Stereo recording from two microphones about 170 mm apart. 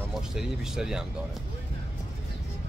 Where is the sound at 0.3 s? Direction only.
5° right (ahead or behind).